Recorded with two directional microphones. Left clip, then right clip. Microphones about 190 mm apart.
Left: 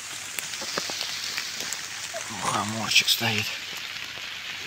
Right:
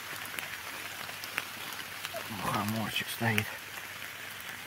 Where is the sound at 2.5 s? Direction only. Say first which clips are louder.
Left 9 dB; 25° left (ahead or behind).